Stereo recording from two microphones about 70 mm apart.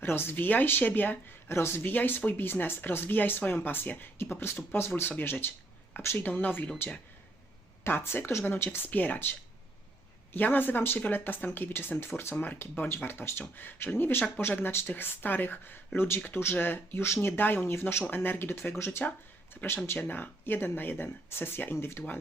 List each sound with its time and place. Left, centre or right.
0.0 s speech: left
10.3 s speech: left
19.6 s speech: left